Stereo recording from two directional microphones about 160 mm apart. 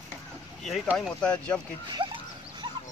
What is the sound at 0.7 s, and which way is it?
Speech, centre (ahead or behind).